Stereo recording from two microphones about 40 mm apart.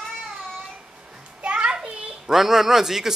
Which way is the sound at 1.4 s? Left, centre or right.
Right.